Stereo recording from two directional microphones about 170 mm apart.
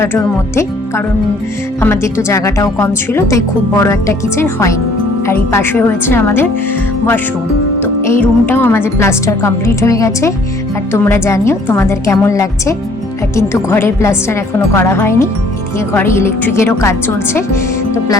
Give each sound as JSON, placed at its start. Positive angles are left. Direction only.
{"t": 0.0, "sound": "speech", "side_deg": 15}
{"t": 7.8, "sound": "speech", "side_deg": 15}